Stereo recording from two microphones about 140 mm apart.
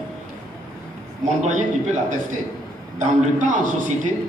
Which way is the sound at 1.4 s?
60° right (ahead or behind).